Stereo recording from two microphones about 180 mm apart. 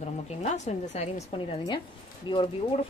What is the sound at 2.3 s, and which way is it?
Speech, 25° left (ahead or behind).